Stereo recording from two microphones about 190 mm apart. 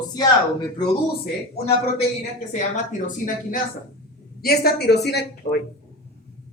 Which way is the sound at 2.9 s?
45° left (ahead or behind).